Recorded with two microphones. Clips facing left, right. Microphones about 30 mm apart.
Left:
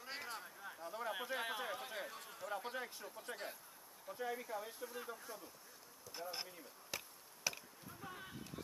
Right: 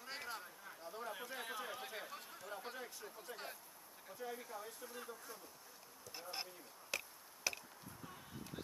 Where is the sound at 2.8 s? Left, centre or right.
Centre.